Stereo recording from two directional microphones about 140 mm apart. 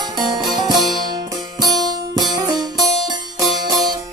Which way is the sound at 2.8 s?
Centre (ahead or behind).